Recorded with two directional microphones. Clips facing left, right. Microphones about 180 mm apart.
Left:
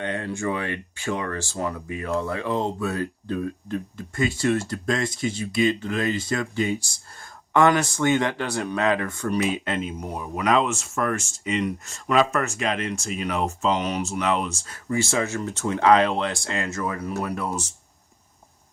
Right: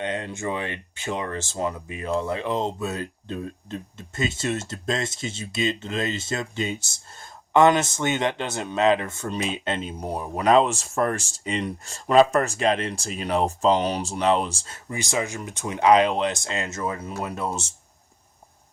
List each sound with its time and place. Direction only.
0.0 s speech: 20° right (ahead or behind)